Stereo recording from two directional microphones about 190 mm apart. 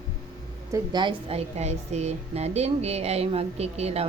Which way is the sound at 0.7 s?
25° right (ahead or behind).